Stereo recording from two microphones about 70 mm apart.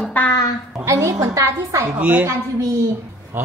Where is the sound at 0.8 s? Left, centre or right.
Right.